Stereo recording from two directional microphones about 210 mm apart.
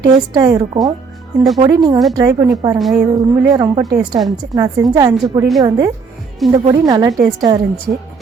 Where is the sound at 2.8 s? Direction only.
Centre (ahead or behind).